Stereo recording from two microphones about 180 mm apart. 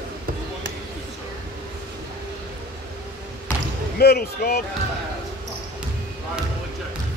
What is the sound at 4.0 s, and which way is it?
Speech, 60° left (ahead or behind).